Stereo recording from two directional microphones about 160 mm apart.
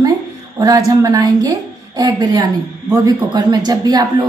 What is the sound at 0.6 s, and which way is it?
A woman's voice, 20° right (ahead or behind).